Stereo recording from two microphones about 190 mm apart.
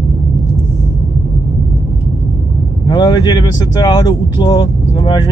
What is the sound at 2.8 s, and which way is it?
Speech, 20° left (ahead or behind).